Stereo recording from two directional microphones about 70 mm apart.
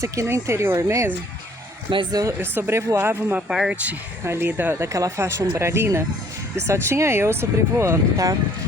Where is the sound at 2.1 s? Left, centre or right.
Right.